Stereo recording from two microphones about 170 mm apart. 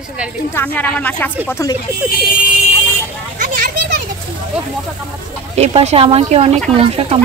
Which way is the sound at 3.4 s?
50° right (ahead or behind).